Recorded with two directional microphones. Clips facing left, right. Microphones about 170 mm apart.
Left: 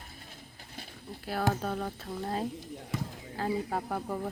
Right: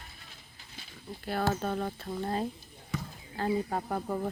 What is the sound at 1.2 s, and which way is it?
Speech, 5° left (ahead or behind).